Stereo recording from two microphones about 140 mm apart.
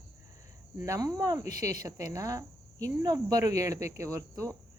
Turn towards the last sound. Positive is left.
turn(degrees=-20)  # may be behind; listen again after turning